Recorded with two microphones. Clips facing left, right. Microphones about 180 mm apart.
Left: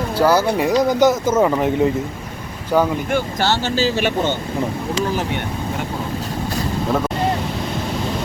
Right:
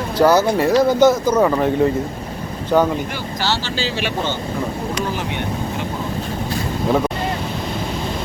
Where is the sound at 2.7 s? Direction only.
10° left (ahead or behind).